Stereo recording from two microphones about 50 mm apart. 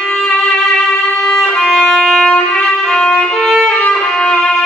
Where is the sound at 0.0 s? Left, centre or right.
Centre.